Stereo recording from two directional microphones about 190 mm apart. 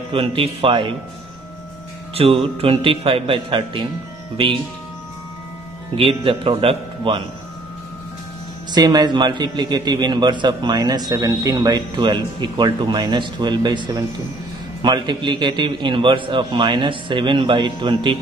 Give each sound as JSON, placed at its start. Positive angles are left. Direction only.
{"t": 0.1, "sound": "a man's voice", "side_deg": -30}
{"t": 2.1, "sound": "a man's voice", "side_deg": -30}
{"t": 5.9, "sound": "a man's voice", "side_deg": -30}
{"t": 8.7, "sound": "a man's voice", "side_deg": -20}